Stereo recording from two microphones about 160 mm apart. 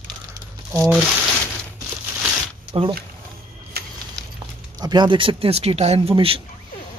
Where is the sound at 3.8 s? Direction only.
75° right (ahead or behind).